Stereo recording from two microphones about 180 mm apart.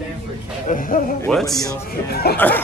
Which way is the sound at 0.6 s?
50° left (ahead or behind).